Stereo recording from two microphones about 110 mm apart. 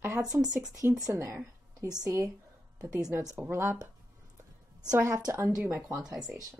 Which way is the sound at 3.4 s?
20° right (ahead or behind).